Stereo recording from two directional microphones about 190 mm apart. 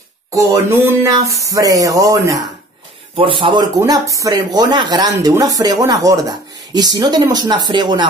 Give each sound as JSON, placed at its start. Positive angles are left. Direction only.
{"t": 0.3, "sound": "speech", "side_deg": -15}